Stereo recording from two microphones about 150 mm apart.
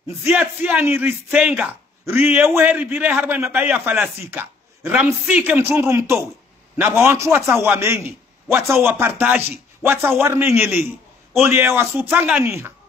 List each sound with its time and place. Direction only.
0.2 s speech: 10° right (ahead or behind)